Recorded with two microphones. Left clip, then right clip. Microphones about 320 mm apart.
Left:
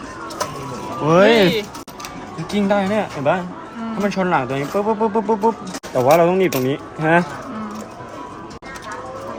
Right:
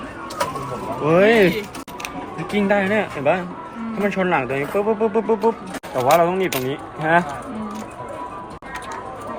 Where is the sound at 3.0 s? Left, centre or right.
Left.